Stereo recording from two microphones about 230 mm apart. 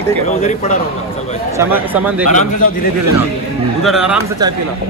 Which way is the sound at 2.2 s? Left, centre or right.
Left.